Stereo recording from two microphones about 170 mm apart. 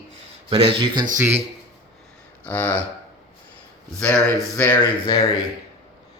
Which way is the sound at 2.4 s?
10° left (ahead or behind).